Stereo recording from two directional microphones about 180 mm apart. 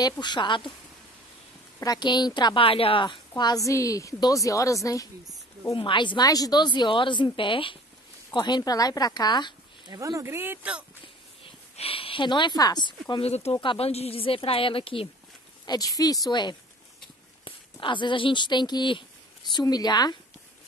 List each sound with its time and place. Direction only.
0.0 s a woman's voice: 25° left (ahead or behind)
1.8 s a woman's voice: 25° left (ahead or behind)
9.8 s speech: 20° right (ahead or behind)
11.4 s speech: 30° left (ahead or behind)
13.1 s a woman's voice: 35° left (ahead or behind)